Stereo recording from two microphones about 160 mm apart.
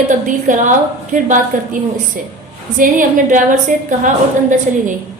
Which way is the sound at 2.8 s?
55° right (ahead or behind).